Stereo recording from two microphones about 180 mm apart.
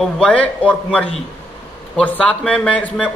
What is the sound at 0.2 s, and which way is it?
A man's voice, 5° left (ahead or behind).